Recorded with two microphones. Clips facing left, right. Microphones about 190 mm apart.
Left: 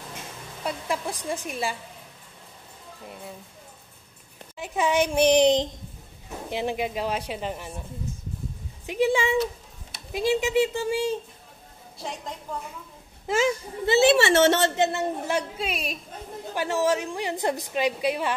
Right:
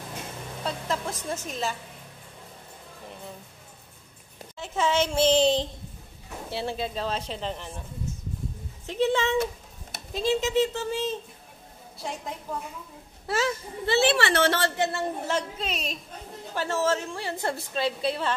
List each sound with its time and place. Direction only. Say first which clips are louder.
0.7 s a woman's voice: left 1 dB; 10° left (ahead or behind)
4.6 s a woman's voice: left 2 dB; 15° left (ahead or behind)
8.8 s a woman's voice: left 2 dB; 10° left (ahead or behind)
12.0 s a woman's voice: even; centre (ahead or behind)
13.8 s a woman's voice: left 4 dB; 20° left (ahead or behind)